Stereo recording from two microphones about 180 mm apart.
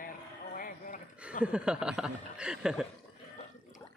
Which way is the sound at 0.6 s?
50° left (ahead or behind).